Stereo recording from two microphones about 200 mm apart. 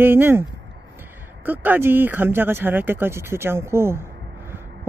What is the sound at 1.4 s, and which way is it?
Speech, 10° right (ahead or behind).